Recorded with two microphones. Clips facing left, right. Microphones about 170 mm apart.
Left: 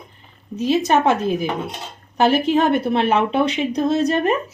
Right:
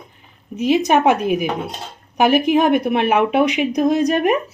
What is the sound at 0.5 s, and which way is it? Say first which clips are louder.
Speech: right 2 dB; 15° right (ahead or behind).